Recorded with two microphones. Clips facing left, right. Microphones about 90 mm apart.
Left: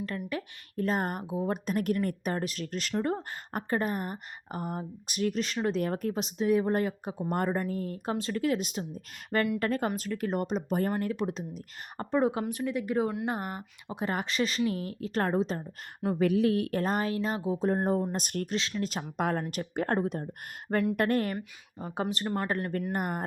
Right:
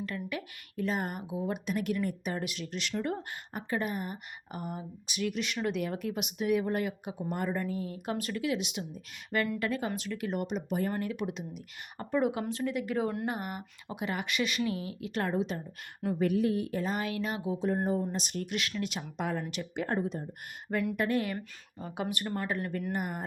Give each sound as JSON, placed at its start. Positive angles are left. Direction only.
{"t": 0.3, "sound": "speech", "side_deg": 40}
{"t": 12.5, "sound": "speech", "side_deg": 20}
{"t": 13.2, "sound": "speech", "side_deg": 30}
{"t": 16.1, "sound": "speech", "side_deg": 80}
{"t": 16.8, "sound": "speech", "side_deg": 40}
{"t": 18.1, "sound": "speech", "side_deg": 50}
{"t": 18.4, "sound": "speech", "side_deg": 25}
{"t": 18.9, "sound": "speech", "side_deg": 40}
{"t": 19.9, "sound": "speech", "side_deg": 60}
{"t": 21.8, "sound": "speech", "side_deg": 35}
{"t": 22.0, "sound": "speech", "side_deg": 20}
{"t": 22.4, "sound": "speech", "side_deg": 40}